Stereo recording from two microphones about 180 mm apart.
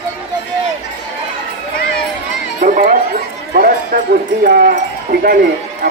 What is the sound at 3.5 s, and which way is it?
Speech, 55° right (ahead or behind).